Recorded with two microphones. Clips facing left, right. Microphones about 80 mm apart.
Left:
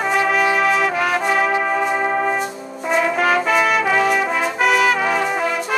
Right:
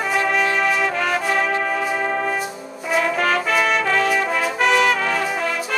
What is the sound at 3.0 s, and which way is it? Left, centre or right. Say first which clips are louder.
Brass instrument: left 2 dB; centre.